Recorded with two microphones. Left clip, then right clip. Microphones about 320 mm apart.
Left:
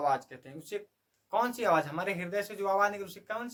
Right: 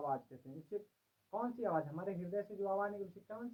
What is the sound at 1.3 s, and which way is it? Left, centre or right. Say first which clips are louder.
Speech: left 11 dB; centre.